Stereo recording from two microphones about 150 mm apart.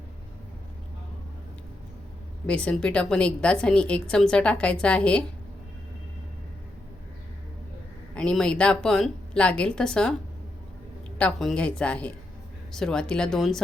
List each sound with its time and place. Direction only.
2.5 s a woman's voice: 10° left (ahead or behind)
8.1 s a woman's voice: 5° left (ahead or behind)
11.2 s a woman's voice: 5° left (ahead or behind)